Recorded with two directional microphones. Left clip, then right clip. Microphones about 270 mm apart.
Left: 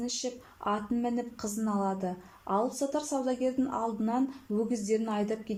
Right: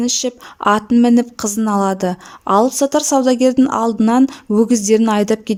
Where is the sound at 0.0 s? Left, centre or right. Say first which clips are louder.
Right 16 dB; right.